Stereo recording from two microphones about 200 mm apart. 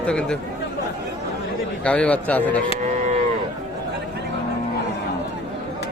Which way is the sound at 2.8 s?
35° right (ahead or behind).